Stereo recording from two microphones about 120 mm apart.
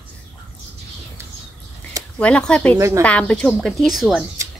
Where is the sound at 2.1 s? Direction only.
10° left (ahead or behind).